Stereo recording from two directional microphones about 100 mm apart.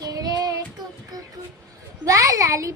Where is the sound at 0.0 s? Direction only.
40° right (ahead or behind).